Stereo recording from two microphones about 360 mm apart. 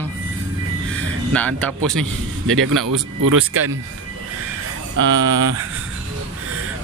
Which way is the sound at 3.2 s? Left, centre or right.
Right.